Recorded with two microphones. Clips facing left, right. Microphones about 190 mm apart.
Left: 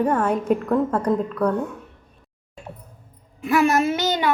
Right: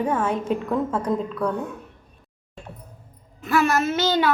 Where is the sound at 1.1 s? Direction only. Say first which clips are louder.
Left 3 dB; 10° left (ahead or behind).